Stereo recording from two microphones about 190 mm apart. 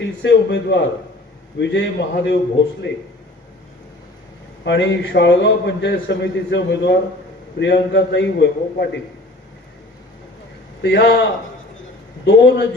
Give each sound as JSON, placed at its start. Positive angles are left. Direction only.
{"t": 0.0, "sound": "a man's voice", "side_deg": 65}
{"t": 2.8, "sound": "a man's voice", "side_deg": 70}
{"t": 4.6, "sound": "a man's voice", "side_deg": 65}
{"t": 10.8, "sound": "a man's voice", "side_deg": 60}
{"t": 12.2, "sound": "a man's voice", "side_deg": 65}